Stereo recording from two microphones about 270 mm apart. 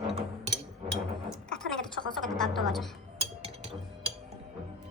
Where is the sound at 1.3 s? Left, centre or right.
Centre.